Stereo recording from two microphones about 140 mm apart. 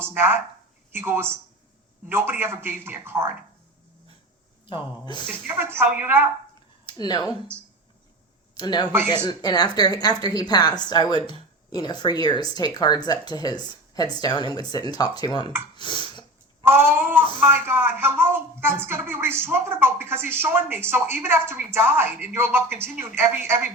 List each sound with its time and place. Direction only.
0.0 s a woman's voice: 15° right (ahead or behind)
4.6 s speech: 35° left (ahead or behind)
5.5 s a woman's voice: 15° right (ahead or behind)
6.8 s speech: 30° left (ahead or behind)
8.5 s speech: 30° left (ahead or behind)
8.9 s a woman's voice: 15° right (ahead or behind)
9.2 s a woman's voice: 30° left (ahead or behind)
15.7 s a sound: 35° left (ahead or behind)
16.6 s a woman's voice: 15° right (ahead or behind)